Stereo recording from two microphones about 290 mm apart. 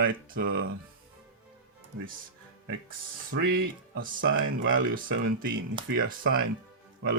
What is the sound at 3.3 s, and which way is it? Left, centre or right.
Speech, right.